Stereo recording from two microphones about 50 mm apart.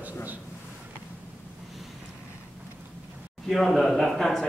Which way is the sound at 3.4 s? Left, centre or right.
Centre.